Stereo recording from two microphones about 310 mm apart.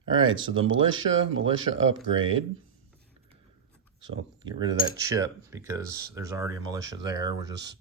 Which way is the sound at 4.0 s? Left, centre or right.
Centre.